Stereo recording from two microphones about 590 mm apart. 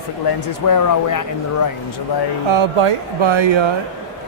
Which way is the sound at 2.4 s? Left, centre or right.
Right.